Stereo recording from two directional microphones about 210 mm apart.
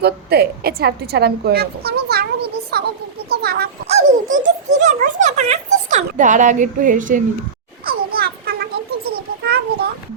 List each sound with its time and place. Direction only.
0.0 s a woman's voice: 50° right (ahead or behind)
3.8 s a child's voice: 35° right (ahead or behind)
7.9 s a sound: 45° right (ahead or behind)